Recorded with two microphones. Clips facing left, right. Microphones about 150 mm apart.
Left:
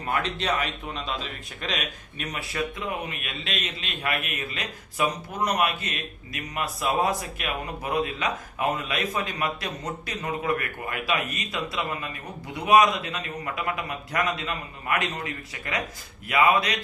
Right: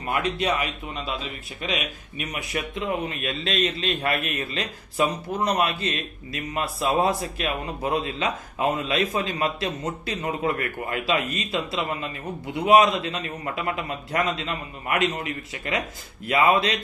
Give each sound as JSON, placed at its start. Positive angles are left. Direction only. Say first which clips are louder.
{"t": 0.1, "sound": "a man's voice", "louder": "right 2 dB", "side_deg": -10}
{"t": 3.1, "sound": "a man's voice", "louder": "right 6 dB", "side_deg": -35}